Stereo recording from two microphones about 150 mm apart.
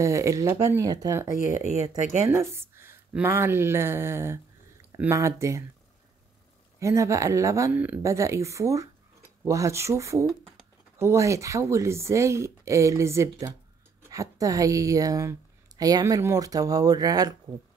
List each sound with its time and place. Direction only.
0.0 s speech: 20° right (ahead or behind)
1.6 s speech: 50° right (ahead or behind)
2.2 s speech: 15° right (ahead or behind)
6.8 s speech: 20° right (ahead or behind)